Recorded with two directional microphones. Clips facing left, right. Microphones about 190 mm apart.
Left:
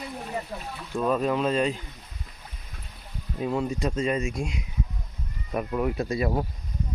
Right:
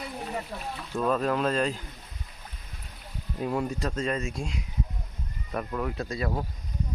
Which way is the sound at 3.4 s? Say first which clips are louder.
Left 2 dB; 5° right (ahead or behind).